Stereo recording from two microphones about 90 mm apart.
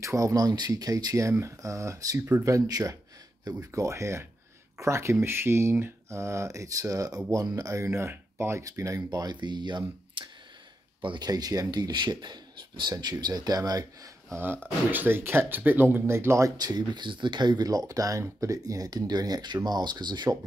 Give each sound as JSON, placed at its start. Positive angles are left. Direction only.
{"t": 0.0, "sound": "speech", "side_deg": -35}
{"t": 2.1, "sound": "speech", "side_deg": -25}
{"t": 11.2, "sound": "speech", "side_deg": -45}
{"t": 14.3, "sound": "speech", "side_deg": -25}
{"t": 16.5, "sound": "speech", "side_deg": -50}